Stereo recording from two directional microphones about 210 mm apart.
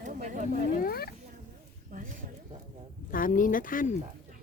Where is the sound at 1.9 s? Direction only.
40° right (ahead or behind).